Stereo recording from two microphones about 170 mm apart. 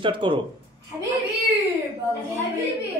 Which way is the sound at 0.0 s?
30° right (ahead or behind).